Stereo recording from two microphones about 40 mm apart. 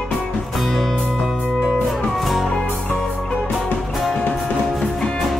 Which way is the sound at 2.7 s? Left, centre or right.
Left.